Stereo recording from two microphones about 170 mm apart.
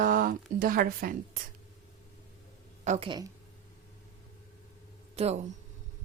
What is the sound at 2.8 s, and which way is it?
Speech, 45° right (ahead or behind).